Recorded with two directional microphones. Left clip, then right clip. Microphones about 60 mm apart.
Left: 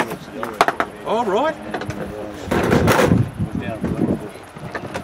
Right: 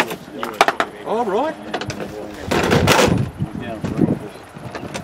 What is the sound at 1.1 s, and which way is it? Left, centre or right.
Speech, centre.